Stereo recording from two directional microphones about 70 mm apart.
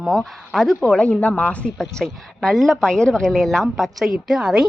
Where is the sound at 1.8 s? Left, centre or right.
Centre.